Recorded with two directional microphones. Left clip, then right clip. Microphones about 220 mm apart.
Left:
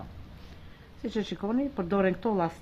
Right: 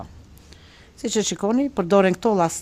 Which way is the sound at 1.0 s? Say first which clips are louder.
Right 10 dB; 50° right (ahead or behind).